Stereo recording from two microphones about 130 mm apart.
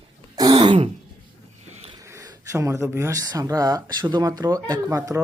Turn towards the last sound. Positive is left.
turn(degrees=-30)  # may be behind; listen again after turning